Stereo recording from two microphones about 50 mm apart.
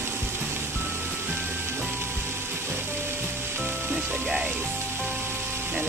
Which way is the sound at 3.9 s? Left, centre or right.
Centre.